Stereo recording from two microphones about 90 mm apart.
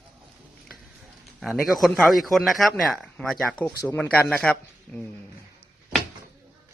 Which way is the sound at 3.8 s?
20° left (ahead or behind).